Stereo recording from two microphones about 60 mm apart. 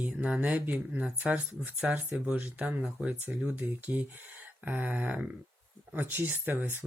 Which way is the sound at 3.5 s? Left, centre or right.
Right.